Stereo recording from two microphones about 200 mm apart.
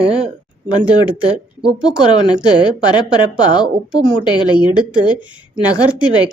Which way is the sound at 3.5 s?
5° right (ahead or behind).